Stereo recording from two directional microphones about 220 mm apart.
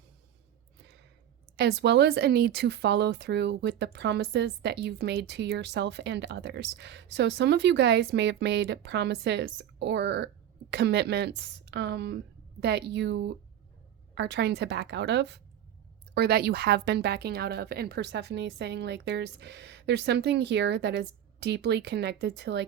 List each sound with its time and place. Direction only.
1.5 s speech: 50° right (ahead or behind)